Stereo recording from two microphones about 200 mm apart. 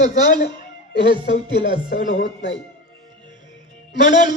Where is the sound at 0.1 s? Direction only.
55° left (ahead or behind).